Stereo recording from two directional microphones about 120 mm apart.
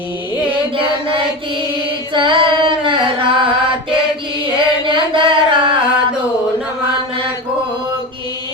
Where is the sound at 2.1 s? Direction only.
40° right (ahead or behind).